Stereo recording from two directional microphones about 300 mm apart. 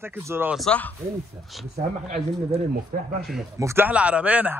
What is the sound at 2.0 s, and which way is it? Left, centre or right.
Speech, right.